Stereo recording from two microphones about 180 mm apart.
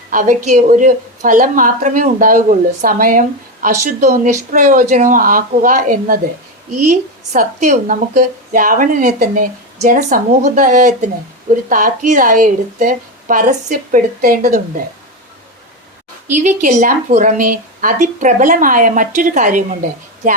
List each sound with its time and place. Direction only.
0.1 s speech: 45° right (ahead or behind)
16.4 s speech: 45° right (ahead or behind)